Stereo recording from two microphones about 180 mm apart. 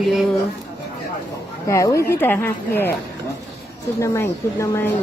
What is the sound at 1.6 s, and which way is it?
A woman's voice, 15° left (ahead or behind).